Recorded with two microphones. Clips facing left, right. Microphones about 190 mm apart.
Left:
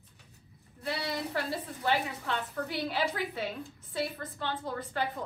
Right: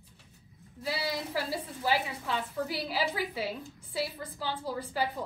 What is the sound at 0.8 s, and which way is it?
A woman's voice, 5° right (ahead or behind).